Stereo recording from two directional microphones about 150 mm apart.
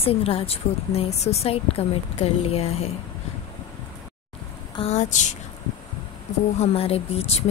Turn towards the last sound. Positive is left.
turn(degrees=45)  # may be behind; listen again after turning